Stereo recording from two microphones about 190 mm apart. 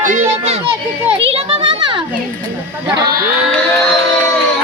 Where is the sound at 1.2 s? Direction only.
30° right (ahead or behind).